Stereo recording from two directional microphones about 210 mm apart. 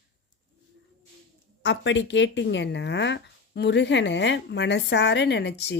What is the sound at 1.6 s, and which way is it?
Speech, 55° left (ahead or behind).